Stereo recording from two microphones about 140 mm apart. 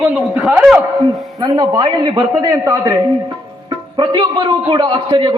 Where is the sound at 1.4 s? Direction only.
30° right (ahead or behind).